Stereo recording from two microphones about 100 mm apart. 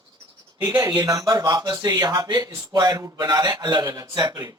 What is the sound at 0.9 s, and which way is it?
A man's voice, 40° right (ahead or behind).